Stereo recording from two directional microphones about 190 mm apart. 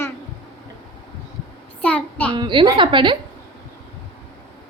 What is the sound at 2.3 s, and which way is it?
Speech, 25° right (ahead or behind).